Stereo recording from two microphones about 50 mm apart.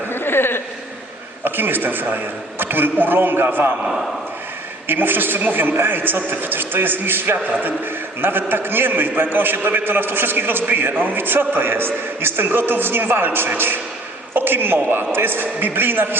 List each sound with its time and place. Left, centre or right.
0.1 s a sound: left
1.5 s a man's voice: right
4.9 s a man's voice: right